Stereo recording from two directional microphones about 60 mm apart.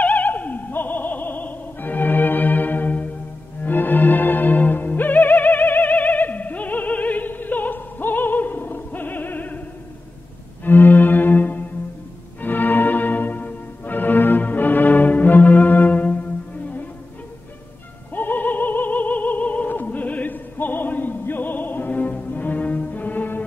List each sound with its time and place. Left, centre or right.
0.0 s opera: left
3.6 s music: left
10.6 s music: left
18.1 s opera: left